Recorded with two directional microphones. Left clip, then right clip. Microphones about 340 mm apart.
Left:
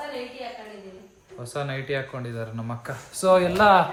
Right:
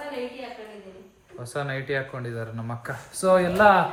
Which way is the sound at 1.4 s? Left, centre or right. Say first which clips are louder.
Even; centre.